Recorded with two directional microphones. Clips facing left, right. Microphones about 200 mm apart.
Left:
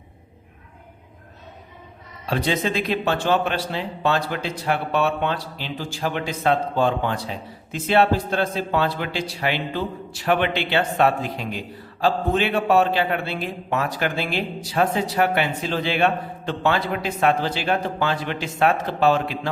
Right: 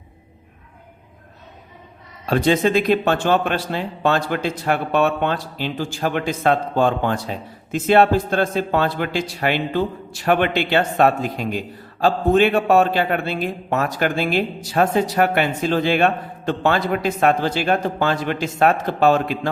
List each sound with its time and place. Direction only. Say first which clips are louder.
2.3 s speech: right 6 dB; 50° right (ahead or behind)